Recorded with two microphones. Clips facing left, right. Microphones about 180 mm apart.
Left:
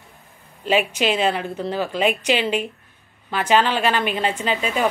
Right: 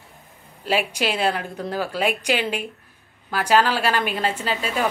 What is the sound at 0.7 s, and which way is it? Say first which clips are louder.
A woman's voice: left 3 dB; 10° right (ahead or behind).